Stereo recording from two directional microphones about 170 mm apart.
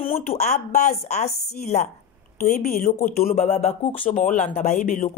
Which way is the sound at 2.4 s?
60° left (ahead or behind).